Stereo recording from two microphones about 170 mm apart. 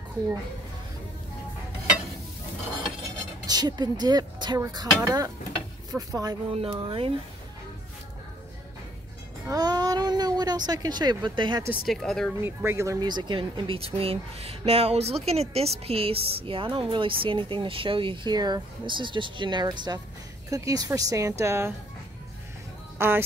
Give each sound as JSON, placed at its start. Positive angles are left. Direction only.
{"t": 3.4, "sound": "speech", "side_deg": -25}
{"t": 6.5, "sound": "speech", "side_deg": -35}
{"t": 9.5, "sound": "speech", "side_deg": -25}
{"t": 11.8, "sound": "speech", "side_deg": 0}
{"t": 12.4, "sound": "speech", "side_deg": -15}
{"t": 22.9, "sound": "speech", "side_deg": -15}